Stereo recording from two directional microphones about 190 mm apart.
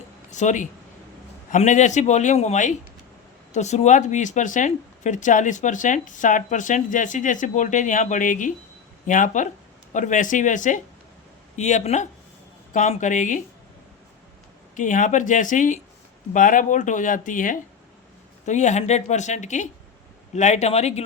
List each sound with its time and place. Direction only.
0.3 s speech: 40° left (ahead or behind)
14.8 s speech: 40° left (ahead or behind)